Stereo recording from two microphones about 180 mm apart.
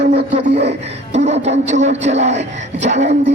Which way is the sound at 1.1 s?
40° right (ahead or behind).